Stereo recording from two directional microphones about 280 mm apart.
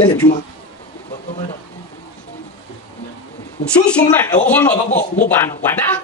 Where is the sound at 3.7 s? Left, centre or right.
Centre.